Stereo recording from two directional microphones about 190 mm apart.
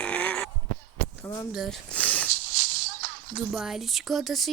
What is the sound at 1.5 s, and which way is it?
Speech, centre (ahead or behind).